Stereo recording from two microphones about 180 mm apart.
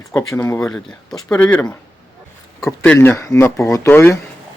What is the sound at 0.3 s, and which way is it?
Speech, 15° left (ahead or behind).